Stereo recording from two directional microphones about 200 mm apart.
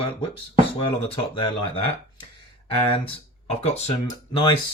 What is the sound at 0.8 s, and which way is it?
Speech, 25° left (ahead or behind).